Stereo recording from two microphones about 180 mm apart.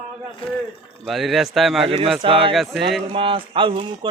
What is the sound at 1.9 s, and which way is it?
Speech, 30° right (ahead or behind).